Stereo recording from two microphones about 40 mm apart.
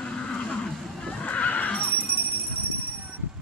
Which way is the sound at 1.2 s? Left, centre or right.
Left.